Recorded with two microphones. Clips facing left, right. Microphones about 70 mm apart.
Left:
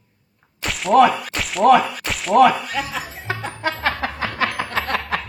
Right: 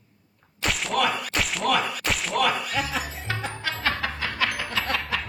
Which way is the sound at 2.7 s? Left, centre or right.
Centre.